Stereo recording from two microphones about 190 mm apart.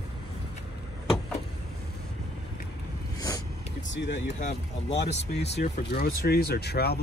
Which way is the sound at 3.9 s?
65° left (ahead or behind).